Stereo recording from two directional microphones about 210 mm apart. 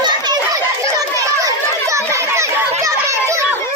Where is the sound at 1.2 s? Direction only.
15° right (ahead or behind).